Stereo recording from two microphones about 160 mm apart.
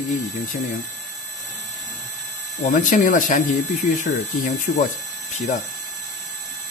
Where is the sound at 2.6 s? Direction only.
50° left (ahead or behind).